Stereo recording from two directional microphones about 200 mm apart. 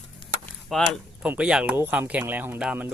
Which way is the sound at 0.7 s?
Centre (ahead or behind).